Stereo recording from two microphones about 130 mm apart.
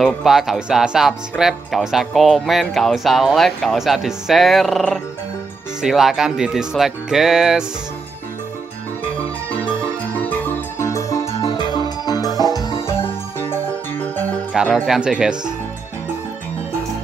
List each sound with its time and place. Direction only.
0.0 s speech: centre (ahead or behind)
10.8 s music: 25° left (ahead or behind)
11.2 s music: 50° left (ahead or behind)
11.5 s music: 35° left (ahead or behind); by 13.6 s 15° left (ahead or behind)
14.5 s music: 5° right (ahead or behind)
14.9 s speech: 5° right (ahead or behind)